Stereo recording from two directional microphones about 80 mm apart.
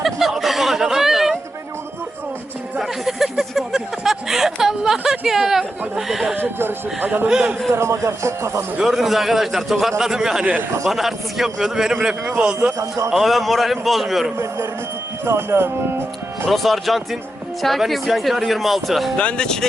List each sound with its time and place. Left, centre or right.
0.0 s a sound: centre
2.7 s a sound: centre
5.2 s speech: centre
6.3 s speech: right
7.3 s a man's voice: centre
7.7 s speech: right
8.8 s a man's voice: centre
13.1 s speech: centre
15.2 s speech: right
16.5 s speech: centre
19.1 s speech: centre